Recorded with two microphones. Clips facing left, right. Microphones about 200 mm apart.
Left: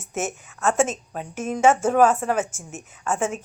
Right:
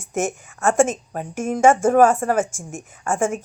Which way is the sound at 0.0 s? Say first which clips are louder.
Right 5 dB; 10° right (ahead or behind).